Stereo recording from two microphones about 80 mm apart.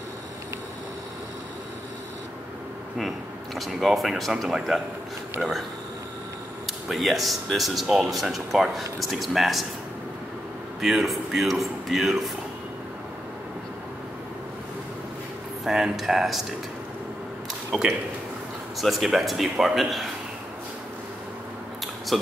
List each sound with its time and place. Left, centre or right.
3.5 s speech: centre
6.9 s speech: centre
10.8 s speech: centre
15.6 s speech: centre
18.8 s speech: centre
22.1 s speech: centre